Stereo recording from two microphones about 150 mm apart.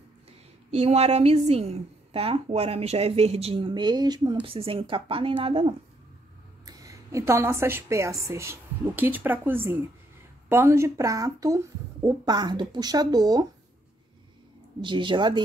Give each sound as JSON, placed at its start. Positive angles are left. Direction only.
{"t": 0.7, "sound": "a woman's voice", "side_deg": -45}
{"t": 6.6, "sound": "a woman's voice", "side_deg": -20}
{"t": 14.8, "sound": "a woman's voice", "side_deg": -30}